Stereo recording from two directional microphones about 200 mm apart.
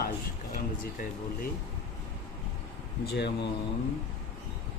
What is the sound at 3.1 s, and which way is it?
Mantra, 60° left (ahead or behind).